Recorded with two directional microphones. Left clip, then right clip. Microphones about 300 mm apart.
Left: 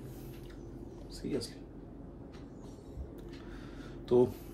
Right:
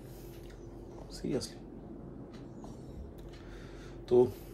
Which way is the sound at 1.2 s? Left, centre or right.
Right.